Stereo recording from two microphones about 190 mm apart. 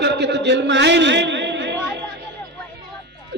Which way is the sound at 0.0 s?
65° right (ahead or behind).